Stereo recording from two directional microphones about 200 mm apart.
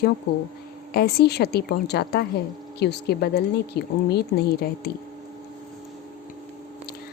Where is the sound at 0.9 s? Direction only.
50° left (ahead or behind).